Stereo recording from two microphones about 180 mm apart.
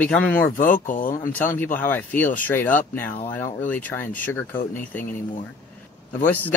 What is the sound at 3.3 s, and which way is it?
Speech, 45° left (ahead or behind).